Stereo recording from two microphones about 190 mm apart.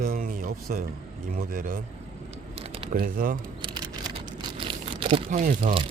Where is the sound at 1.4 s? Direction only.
50° right (ahead or behind).